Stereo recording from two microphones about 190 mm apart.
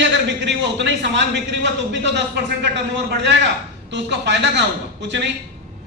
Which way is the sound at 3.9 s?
65° right (ahead or behind).